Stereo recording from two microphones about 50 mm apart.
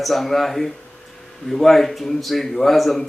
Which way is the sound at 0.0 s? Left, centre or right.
Centre.